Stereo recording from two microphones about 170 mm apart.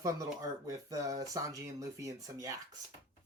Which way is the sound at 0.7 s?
20° right (ahead or behind).